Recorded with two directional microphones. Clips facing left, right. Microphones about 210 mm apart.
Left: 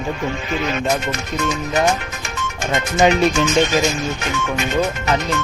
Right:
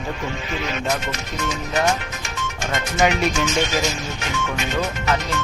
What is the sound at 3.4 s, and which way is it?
Speech, 50° left (ahead or behind).